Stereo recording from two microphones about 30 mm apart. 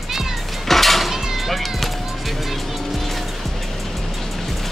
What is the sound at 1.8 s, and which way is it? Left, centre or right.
Music, centre.